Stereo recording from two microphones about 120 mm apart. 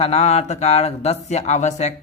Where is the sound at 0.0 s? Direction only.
60° left (ahead or behind).